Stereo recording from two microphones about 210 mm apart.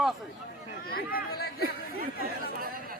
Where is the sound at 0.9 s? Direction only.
45° left (ahead or behind).